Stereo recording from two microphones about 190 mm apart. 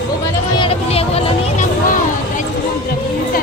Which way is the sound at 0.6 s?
30° left (ahead or behind).